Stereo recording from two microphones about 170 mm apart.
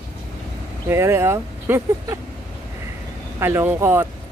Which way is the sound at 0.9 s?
15° right (ahead or behind).